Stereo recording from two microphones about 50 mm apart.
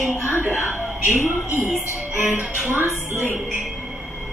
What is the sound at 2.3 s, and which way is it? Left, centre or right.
Music, right.